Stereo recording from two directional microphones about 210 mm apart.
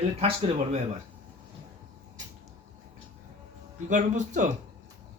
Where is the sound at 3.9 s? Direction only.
35° right (ahead or behind).